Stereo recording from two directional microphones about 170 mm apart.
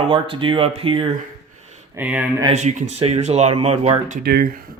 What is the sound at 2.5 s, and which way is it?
Speech, 40° right (ahead or behind).